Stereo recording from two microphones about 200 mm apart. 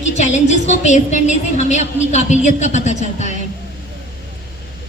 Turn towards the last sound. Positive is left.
turn(degrees=35)  # may be behind; listen again after turning